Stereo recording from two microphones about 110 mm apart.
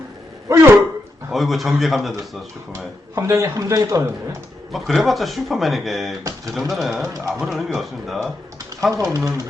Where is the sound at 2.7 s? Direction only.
25° right (ahead or behind).